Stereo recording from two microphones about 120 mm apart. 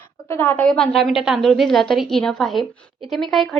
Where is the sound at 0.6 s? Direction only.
5° left (ahead or behind).